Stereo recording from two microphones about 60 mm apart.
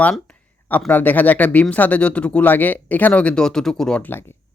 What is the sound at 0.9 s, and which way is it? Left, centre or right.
Speech, left.